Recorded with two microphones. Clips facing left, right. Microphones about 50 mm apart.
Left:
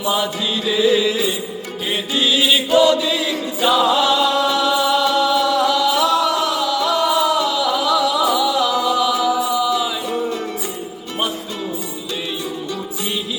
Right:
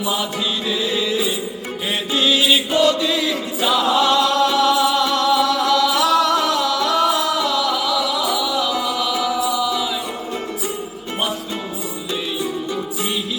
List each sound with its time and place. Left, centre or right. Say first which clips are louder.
0.0 s mantra: left 2 dB; centre
1.9 s music: even; centre
2.7 s chant: left 6 dB; centre
3.6 s music: left 2 dB; centre